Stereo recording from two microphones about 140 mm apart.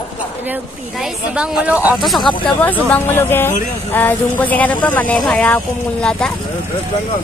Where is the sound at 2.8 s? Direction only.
15° left (ahead or behind).